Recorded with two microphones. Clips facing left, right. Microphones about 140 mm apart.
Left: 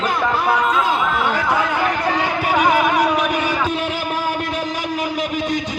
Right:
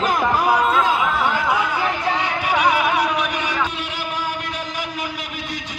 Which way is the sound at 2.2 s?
45° left (ahead or behind).